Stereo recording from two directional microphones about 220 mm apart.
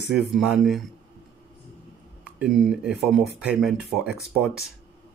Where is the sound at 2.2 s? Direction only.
5° right (ahead or behind).